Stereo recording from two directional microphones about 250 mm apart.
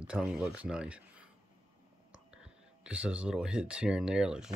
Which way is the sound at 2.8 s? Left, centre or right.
Centre.